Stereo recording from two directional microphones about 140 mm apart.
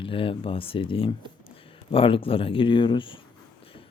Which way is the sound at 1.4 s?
40° left (ahead or behind).